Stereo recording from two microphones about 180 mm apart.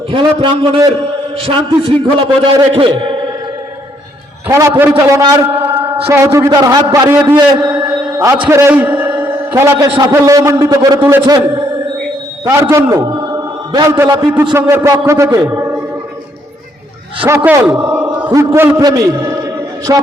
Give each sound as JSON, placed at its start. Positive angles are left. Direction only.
{"t": 0.1, "sound": "a man's voice", "side_deg": -25}
{"t": 4.4, "sound": "a man's voice", "side_deg": -15}
{"t": 7.6, "sound": "a sound", "side_deg": -5}
{"t": 8.2, "sound": "a man's voice", "side_deg": -15}
{"t": 12.5, "sound": "a man's voice", "side_deg": -15}
{"t": 17.2, "sound": "a man's voice", "side_deg": -15}